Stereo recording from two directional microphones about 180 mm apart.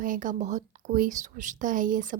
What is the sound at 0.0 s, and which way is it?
Speech, 45° right (ahead or behind).